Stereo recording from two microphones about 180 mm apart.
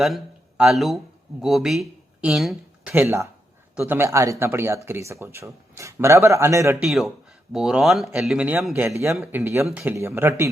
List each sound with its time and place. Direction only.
0.0 s a man's voice: centre (ahead or behind)
6.8 s a man's voice: centre (ahead or behind)